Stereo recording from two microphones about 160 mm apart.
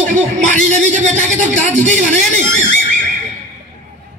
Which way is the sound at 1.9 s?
50° right (ahead or behind).